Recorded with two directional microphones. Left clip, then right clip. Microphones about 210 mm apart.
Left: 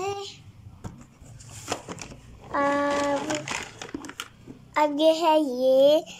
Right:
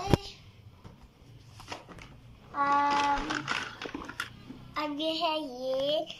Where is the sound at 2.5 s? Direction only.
65° left (ahead or behind).